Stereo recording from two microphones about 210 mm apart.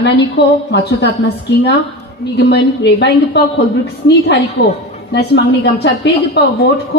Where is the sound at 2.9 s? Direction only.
50° left (ahead or behind).